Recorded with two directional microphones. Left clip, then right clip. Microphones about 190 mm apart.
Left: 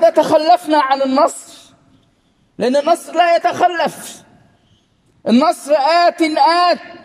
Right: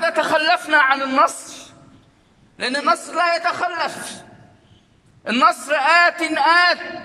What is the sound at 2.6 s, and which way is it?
A man's voice, 35° left (ahead or behind).